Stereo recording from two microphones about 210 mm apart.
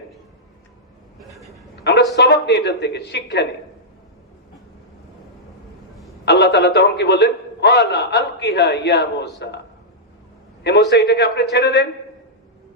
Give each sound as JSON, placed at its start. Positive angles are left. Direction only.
{"t": 1.2, "sound": "a sound", "side_deg": 0}
{"t": 2.1, "sound": "speech", "side_deg": 55}
{"t": 6.2, "sound": "a man's voice", "side_deg": 55}
{"t": 10.6, "sound": "a man's voice", "side_deg": 55}